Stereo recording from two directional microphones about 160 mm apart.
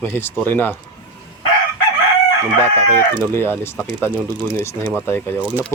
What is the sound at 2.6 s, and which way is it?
Speech, 15° left (ahead or behind).